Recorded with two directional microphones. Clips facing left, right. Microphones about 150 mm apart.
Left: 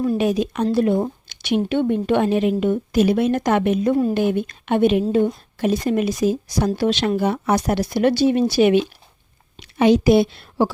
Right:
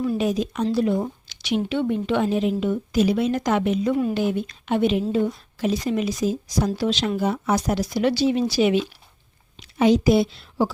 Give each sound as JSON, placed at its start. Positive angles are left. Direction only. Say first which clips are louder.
{"t": 0.2, "sound": "a woman's voice", "louder": "left 3 dB", "side_deg": 65}
{"t": 3.9, "sound": "speech", "louder": "left 4 dB", "side_deg": 40}
{"t": 4.2, "sound": "a woman's voice", "louder": "left 4 dB", "side_deg": 60}